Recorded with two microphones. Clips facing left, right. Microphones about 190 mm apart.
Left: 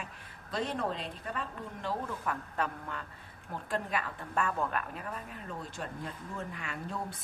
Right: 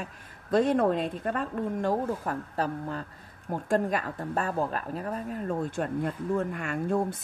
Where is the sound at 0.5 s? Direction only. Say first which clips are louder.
Right 11 dB; 50° right (ahead or behind).